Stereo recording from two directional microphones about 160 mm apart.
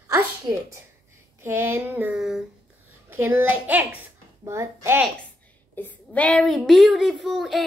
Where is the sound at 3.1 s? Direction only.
15° right (ahead or behind).